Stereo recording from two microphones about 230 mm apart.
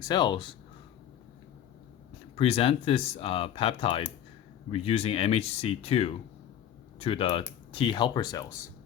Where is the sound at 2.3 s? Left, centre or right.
Left.